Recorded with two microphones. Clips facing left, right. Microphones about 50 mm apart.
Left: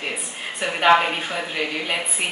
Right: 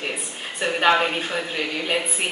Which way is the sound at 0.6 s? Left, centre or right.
Centre.